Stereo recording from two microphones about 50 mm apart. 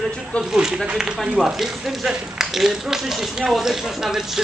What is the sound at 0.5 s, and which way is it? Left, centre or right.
Speech, centre.